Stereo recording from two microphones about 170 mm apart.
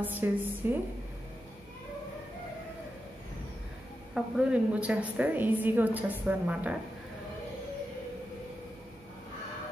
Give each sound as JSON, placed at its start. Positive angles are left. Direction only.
{"t": 0.0, "sound": "a woman's voice", "side_deg": -10}
{"t": 4.1, "sound": "a woman's voice", "side_deg": -5}